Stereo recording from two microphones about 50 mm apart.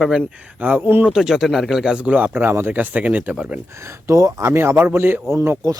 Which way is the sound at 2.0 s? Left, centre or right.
Right.